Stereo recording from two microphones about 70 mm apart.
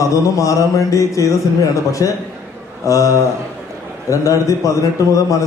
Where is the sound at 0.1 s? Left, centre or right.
Left.